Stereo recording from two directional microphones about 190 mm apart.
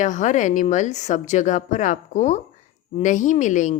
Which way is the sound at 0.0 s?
40° left (ahead or behind).